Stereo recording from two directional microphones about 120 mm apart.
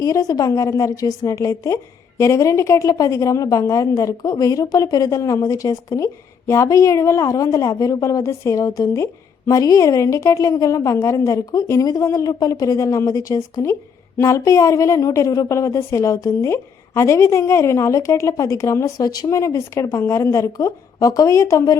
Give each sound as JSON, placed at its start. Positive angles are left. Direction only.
{"t": 0.0, "sound": "a woman's voice", "side_deg": 30}